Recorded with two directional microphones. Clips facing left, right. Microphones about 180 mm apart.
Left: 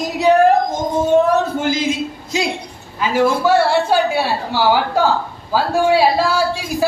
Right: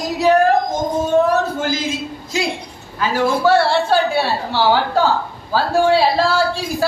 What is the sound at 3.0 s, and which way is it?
A woman's voice, 15° left (ahead or behind).